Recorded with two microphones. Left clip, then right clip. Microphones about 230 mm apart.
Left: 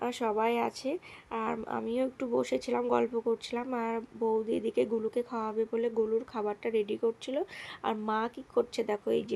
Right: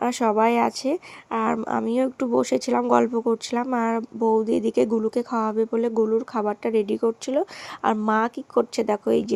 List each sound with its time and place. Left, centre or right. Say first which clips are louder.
0.0 s speech: right 10 dB; right